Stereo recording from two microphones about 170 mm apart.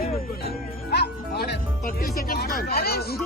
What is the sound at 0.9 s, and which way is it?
Music, 65° left (ahead or behind).